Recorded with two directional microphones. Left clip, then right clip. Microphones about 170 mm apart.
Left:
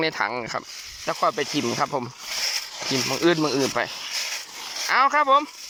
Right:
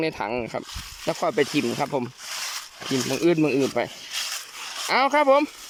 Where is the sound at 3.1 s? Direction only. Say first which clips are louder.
Right 1 dB; 25° right (ahead or behind).